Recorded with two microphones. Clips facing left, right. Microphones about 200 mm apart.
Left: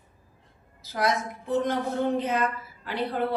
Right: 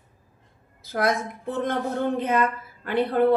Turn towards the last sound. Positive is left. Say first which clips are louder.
# right 8 dB
turn(degrees=-55)  # may be behind; listen again after turning